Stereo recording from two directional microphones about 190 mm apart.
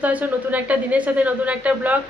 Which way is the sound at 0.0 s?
5° right (ahead or behind).